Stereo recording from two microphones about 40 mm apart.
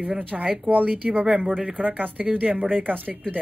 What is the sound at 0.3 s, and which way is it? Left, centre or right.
Speech, right.